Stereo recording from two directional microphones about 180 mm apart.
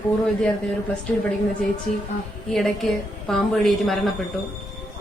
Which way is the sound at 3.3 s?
Centre (ahead or behind).